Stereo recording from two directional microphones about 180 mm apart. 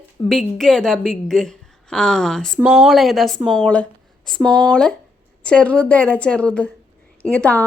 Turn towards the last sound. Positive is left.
turn(degrees=10)  # may be behind; listen again after turning